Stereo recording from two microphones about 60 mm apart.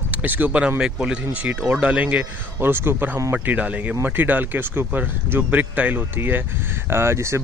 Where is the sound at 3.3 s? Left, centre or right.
Right.